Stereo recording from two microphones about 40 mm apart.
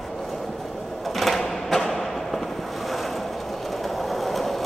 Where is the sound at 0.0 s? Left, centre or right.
Centre.